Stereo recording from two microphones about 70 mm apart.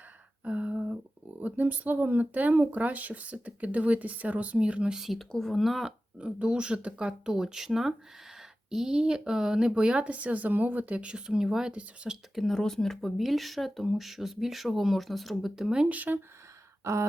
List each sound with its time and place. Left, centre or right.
0.4 s a sound: centre
1.4 s speech: right; by 5.9 s centre
6.1 s speech: centre
12.3 s speech: centre; by 16.2 s right
16.8 s speech: right